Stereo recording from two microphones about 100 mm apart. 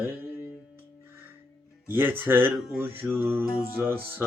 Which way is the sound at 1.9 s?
20° right (ahead or behind).